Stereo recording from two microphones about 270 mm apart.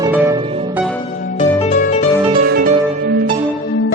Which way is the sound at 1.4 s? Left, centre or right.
Left.